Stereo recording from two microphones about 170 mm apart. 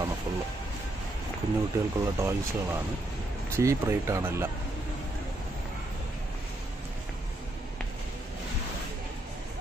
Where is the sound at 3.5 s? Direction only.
15° right (ahead or behind).